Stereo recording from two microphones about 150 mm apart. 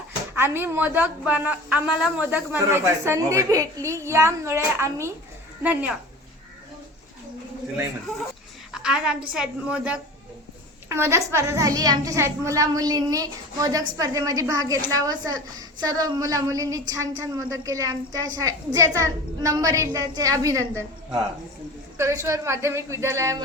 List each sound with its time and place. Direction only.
0.3 s a woman's voice: 15° right (ahead or behind)
8.7 s a woman's voice: 5° right (ahead or behind)
10.8 s a woman's voice: 20° right (ahead or behind)